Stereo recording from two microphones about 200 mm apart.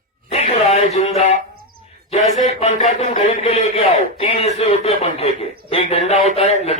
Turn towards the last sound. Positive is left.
turn(degrees=30)  # may be behind; listen again after turning